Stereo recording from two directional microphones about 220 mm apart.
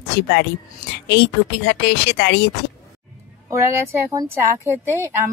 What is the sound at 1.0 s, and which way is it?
Speech, 50° left (ahead or behind).